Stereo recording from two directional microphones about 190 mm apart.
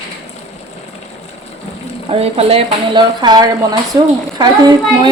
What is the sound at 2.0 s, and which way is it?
A woman's voice, 30° right (ahead or behind).